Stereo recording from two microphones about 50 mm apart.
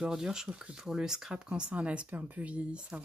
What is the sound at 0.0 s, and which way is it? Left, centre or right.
Speech, centre.